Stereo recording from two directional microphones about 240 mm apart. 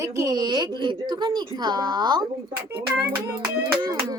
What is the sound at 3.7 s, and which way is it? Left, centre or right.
Speech, centre.